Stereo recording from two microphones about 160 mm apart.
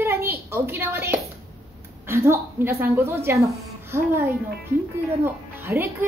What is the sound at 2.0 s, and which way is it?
A woman's voice, 15° right (ahead or behind).